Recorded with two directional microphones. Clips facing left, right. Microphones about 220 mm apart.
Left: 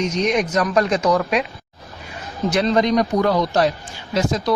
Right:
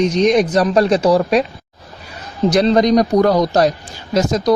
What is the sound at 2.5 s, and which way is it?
Speech, 35° right (ahead or behind).